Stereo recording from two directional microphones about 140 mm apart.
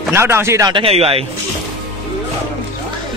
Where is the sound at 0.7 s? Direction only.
45° right (ahead or behind).